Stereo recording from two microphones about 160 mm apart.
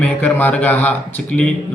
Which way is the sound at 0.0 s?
10° left (ahead or behind).